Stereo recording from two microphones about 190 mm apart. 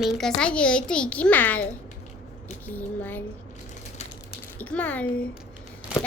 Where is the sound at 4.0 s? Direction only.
35° left (ahead or behind).